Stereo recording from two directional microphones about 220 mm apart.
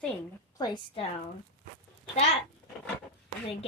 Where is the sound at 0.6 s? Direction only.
20° left (ahead or behind).